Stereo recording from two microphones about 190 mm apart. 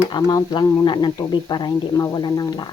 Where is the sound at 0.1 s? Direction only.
20° left (ahead or behind).